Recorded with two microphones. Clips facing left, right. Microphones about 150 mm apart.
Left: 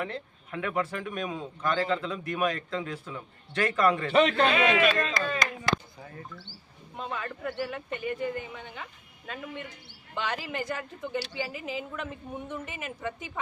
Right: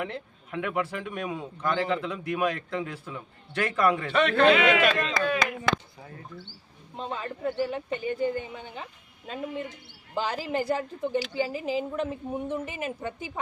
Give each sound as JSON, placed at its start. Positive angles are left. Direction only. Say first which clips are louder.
{"t": 0.0, "sound": "a man's voice", "louder": "right 1 dB", "side_deg": -15}
{"t": 4.3, "sound": "a man's voice", "louder": "right 4 dB", "side_deg": -70}
{"t": 4.9, "sound": "a man's voice", "louder": "right 3 dB", "side_deg": -10}
{"t": 6.9, "sound": "a woman's voice", "louder": "right 2 dB", "side_deg": -30}